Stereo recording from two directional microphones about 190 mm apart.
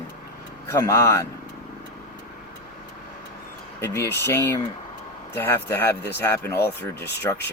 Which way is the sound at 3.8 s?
15° left (ahead or behind).